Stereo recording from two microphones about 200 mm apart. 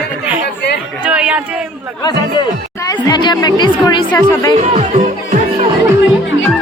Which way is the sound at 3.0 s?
20° left (ahead or behind).